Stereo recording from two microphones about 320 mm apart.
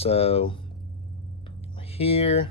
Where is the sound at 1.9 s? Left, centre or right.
Centre.